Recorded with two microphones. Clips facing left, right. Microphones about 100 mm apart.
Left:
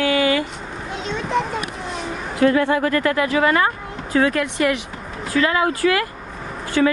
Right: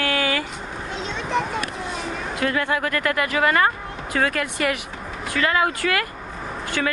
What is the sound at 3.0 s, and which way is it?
Speech, 65° right (ahead or behind).